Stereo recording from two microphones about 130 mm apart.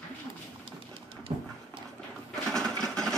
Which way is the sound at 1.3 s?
35° right (ahead or behind).